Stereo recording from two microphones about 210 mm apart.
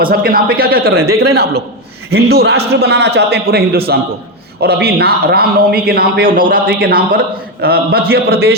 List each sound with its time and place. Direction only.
0.0 s speech: 45° right (ahead or behind)